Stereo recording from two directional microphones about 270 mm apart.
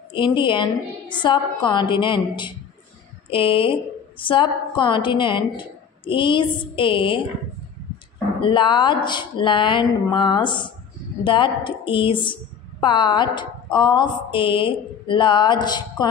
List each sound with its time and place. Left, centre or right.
0.1 s a woman's voice: centre
8.4 s a woman's voice: centre